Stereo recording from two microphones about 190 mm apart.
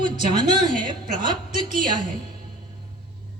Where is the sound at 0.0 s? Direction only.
25° right (ahead or behind).